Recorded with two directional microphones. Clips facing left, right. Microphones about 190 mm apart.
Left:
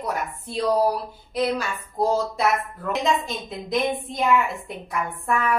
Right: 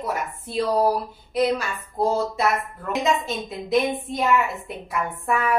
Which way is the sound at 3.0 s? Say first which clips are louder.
Right 2 dB; 5° right (ahead or behind).